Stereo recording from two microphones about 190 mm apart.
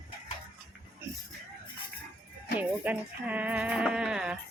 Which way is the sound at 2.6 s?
10° right (ahead or behind).